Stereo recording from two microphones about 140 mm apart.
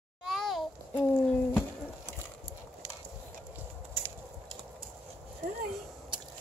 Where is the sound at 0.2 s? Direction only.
Centre (ahead or behind).